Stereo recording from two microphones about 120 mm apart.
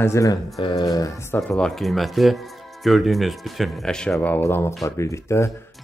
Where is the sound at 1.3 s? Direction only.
20° left (ahead or behind).